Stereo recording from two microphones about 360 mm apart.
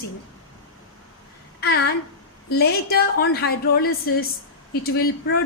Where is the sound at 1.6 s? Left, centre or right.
Left.